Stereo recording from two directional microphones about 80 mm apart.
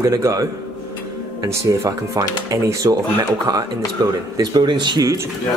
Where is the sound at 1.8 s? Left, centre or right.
Right.